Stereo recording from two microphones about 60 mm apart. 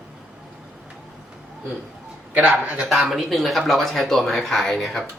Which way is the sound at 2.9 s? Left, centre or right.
Centre.